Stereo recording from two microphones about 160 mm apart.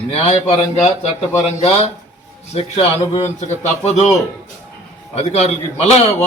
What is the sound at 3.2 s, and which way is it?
A man's voice, 45° left (ahead or behind).